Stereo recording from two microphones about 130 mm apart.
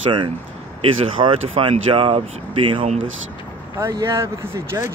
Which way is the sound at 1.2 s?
45° right (ahead or behind).